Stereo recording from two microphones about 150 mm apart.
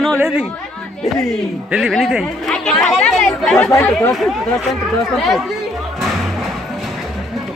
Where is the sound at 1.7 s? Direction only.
Centre (ahead or behind).